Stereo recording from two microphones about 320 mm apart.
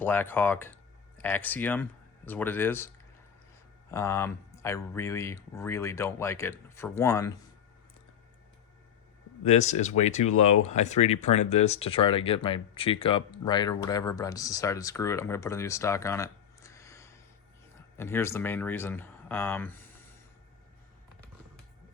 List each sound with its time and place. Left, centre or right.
0.0 s speech: centre
3.9 s speech: centre
9.4 s speech: left